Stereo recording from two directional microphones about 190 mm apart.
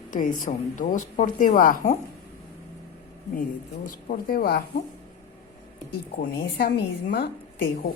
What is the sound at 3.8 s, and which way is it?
Speech, 50° left (ahead or behind).